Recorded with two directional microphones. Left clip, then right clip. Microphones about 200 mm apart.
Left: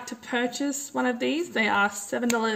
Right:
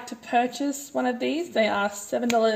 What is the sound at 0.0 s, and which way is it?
Speech, 15° left (ahead or behind).